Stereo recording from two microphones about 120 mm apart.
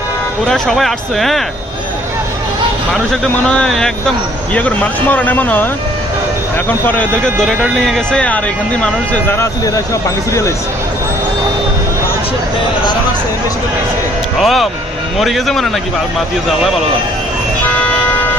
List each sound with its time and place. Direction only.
0.4 s speech: centre (ahead or behind)
2.9 s speech: 5° left (ahead or behind)
6.8 s speech: 15° left (ahead or behind)
7.6 s speech: centre (ahead or behind)
9.3 s speech: 25° left (ahead or behind)
14.4 s speech: centre (ahead or behind)